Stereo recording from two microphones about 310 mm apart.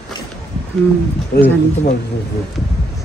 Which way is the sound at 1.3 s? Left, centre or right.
Left.